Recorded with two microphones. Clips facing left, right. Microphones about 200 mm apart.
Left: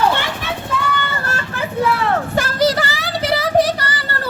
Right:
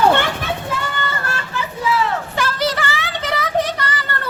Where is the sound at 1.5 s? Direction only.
60° left (ahead or behind).